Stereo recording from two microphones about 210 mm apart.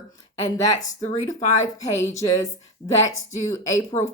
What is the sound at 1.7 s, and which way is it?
Speech, 15° left (ahead or behind).